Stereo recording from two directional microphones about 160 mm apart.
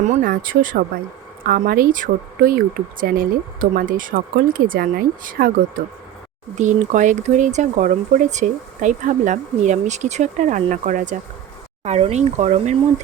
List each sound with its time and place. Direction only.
0.0 s speech: 55° right (ahead or behind)
11.8 s speech: 40° right (ahead or behind)